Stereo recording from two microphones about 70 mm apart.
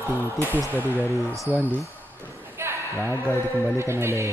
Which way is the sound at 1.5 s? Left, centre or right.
Left.